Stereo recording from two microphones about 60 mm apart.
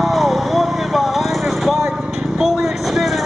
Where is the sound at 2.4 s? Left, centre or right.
Centre.